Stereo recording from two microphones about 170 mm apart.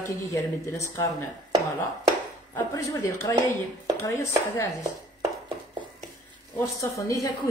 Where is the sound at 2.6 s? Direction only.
15° left (ahead or behind).